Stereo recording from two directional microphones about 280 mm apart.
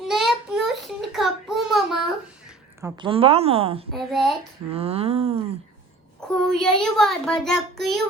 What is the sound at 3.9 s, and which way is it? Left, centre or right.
Speech, centre.